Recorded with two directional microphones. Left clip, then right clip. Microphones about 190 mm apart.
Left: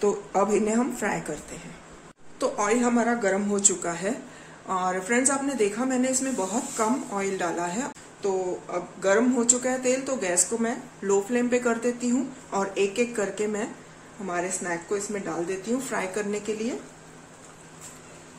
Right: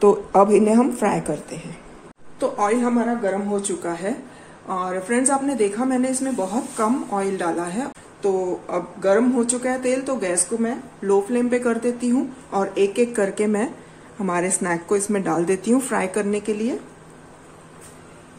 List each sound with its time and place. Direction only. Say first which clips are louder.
0.0 s a woman's voice: right 9 dB; 30° right (ahead or behind)
2.4 s a woman's voice: right 4 dB; 5° left (ahead or behind)
8.3 s a woman's voice: right 5 dB; 15° right (ahead or behind)